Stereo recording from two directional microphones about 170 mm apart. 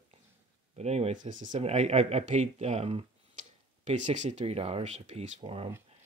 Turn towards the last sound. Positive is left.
turn(degrees=-35)  # may be behind; listen again after turning